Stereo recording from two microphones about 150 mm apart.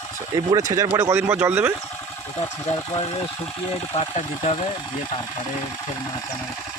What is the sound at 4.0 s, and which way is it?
Speech, 50° left (ahead or behind).